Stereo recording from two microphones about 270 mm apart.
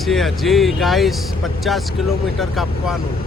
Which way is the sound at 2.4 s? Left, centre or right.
Centre.